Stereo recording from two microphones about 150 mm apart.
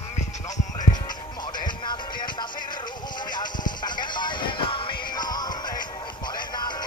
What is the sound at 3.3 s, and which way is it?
Music, 30° left (ahead or behind).